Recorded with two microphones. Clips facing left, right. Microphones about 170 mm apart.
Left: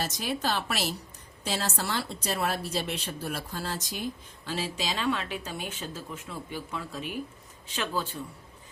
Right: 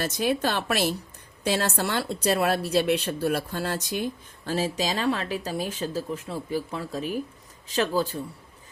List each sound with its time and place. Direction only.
0.0 s a woman's voice: 55° right (ahead or behind); by 8.2 s 40° right (ahead or behind)